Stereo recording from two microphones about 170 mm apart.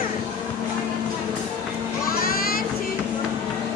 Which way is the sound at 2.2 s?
60° left (ahead or behind).